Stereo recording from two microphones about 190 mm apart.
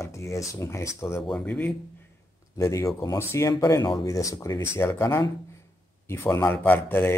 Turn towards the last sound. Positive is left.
turn(degrees=10)  # may be behind; listen again after turning